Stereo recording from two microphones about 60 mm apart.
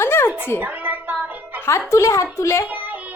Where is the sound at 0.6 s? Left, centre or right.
Right.